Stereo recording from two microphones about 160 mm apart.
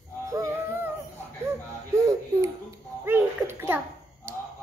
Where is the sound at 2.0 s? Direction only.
20° right (ahead or behind).